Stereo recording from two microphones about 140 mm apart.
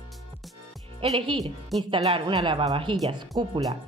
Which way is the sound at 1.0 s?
45° right (ahead or behind).